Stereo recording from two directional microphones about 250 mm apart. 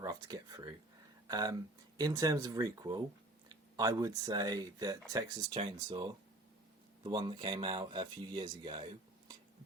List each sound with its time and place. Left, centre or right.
0.0 s speech: centre